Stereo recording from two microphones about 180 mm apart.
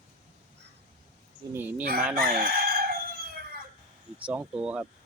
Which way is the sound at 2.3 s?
55° right (ahead or behind).